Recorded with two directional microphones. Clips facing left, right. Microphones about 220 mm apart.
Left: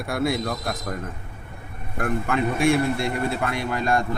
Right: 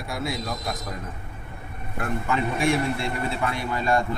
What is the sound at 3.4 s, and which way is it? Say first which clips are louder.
Speech: left 1 dB; 50° left (ahead or behind).